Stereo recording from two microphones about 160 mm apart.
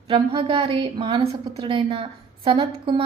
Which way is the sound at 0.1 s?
35° right (ahead or behind).